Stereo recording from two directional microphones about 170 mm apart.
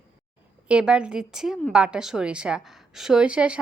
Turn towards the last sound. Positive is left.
turn(degrees=-5)  # may be behind; listen again after turning